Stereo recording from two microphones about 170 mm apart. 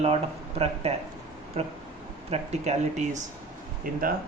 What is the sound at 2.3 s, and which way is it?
Speech, 40° right (ahead or behind).